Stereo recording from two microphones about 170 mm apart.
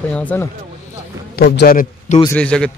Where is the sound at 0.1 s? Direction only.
10° left (ahead or behind).